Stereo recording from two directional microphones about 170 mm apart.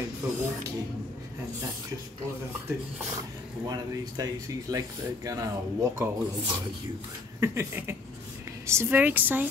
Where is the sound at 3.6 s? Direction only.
20° right (ahead or behind).